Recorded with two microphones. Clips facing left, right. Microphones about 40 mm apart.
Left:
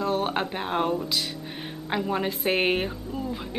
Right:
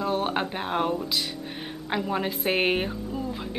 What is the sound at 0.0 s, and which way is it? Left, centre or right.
A woman's voice, centre.